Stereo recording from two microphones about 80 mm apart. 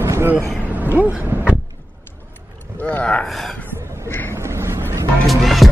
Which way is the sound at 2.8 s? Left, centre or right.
Centre.